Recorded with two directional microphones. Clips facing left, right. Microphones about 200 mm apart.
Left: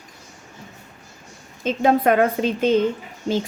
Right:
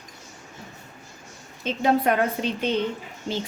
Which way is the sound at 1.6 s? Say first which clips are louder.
Left 4 dB; 50° left (ahead or behind).